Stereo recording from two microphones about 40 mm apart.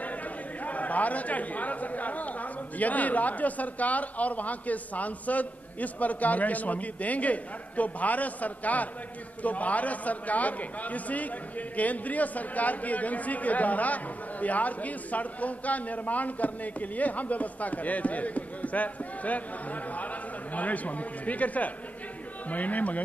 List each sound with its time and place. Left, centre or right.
0.7 s a man's voice: left
20.5 s a man's voice: left